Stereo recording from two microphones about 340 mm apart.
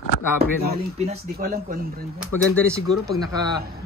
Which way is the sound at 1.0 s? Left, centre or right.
Right.